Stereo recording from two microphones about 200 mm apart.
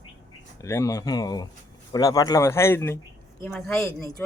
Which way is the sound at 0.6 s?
15° left (ahead or behind).